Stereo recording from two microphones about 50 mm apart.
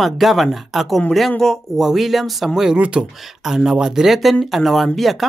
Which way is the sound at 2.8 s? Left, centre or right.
Right.